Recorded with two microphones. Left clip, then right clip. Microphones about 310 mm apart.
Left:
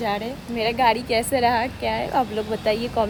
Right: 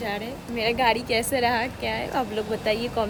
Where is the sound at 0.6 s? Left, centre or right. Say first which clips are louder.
Left 3 dB; centre.